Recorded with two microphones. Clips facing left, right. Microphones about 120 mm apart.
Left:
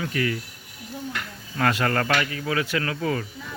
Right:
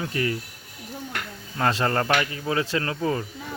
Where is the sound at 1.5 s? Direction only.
25° right (ahead or behind).